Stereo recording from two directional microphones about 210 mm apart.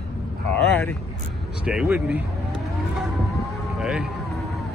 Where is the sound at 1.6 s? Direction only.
5° right (ahead or behind).